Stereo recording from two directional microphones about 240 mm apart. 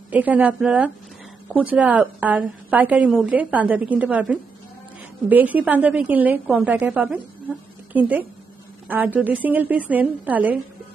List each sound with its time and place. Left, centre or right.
0.1 s a woman's voice: centre